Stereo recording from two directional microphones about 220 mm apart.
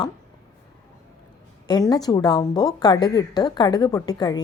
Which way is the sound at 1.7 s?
15° left (ahead or behind).